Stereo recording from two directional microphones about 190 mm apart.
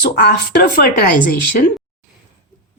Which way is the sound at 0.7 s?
55° left (ahead or behind).